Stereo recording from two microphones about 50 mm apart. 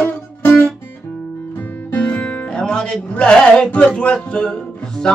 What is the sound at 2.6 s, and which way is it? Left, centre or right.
Speech, centre.